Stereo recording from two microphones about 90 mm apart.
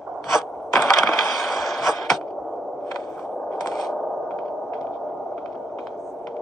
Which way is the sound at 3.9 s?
Centre (ahead or behind).